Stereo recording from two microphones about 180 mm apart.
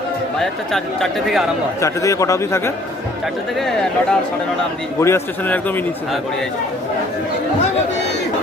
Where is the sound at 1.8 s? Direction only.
15° left (ahead or behind).